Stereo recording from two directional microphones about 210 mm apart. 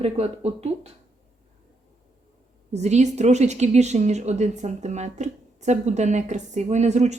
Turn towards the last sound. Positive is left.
turn(degrees=-35)  # may be behind; listen again after turning